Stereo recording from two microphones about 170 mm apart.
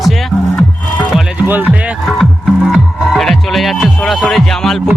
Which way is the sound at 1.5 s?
10° right (ahead or behind).